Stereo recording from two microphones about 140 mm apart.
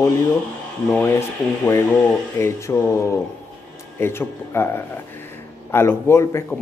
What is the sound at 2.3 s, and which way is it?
Speech, 15° left (ahead or behind).